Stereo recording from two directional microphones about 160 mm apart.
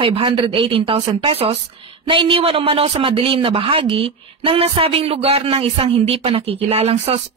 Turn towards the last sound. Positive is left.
turn(degrees=-40)  # may be behind; listen again after turning